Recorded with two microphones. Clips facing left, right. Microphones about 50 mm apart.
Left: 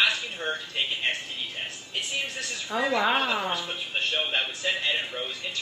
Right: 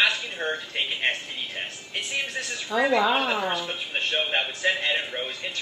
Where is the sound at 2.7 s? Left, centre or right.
Centre.